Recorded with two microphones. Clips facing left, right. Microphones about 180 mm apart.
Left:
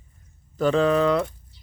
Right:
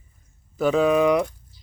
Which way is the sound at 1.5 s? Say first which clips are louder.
Right 1 dB; 70° left (ahead or behind).